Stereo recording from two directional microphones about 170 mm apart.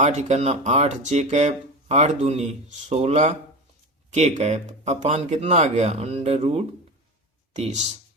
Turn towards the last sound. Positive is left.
turn(degrees=-45)  # may be behind; listen again after turning